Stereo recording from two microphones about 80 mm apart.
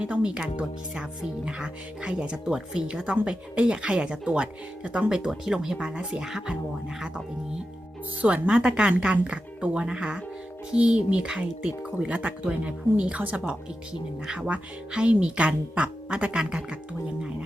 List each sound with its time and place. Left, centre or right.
0.0 s speech: centre
8.2 s speech: centre